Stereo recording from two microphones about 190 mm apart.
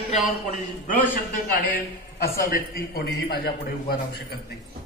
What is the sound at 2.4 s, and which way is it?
A man's voice, 50° left (ahead or behind).